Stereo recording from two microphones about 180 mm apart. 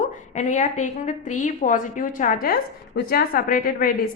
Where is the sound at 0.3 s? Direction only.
40° left (ahead or behind).